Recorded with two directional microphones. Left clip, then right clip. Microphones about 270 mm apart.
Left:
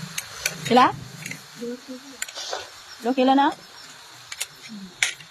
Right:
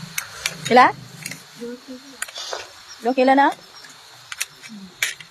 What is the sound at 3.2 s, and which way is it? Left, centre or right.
Speech, centre.